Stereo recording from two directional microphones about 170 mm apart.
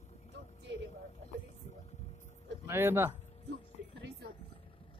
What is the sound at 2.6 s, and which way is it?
Speech, 15° right (ahead or behind).